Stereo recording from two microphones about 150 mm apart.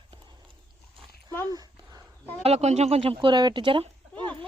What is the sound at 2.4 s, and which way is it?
Speech, 45° right (ahead or behind).